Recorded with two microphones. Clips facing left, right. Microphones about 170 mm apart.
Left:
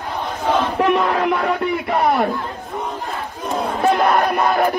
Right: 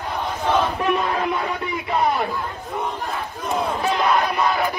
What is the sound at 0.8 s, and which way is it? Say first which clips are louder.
Crowd: left 4 dB; 65° left (ahead or behind).